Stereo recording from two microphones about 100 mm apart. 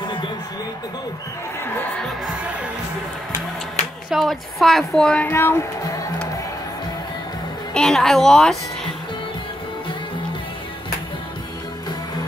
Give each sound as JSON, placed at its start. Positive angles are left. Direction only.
{"t": 4.1, "sound": "speech", "side_deg": 0}
{"t": 5.3, "sound": "speech", "side_deg": 25}
{"t": 7.7, "sound": "speech", "side_deg": 5}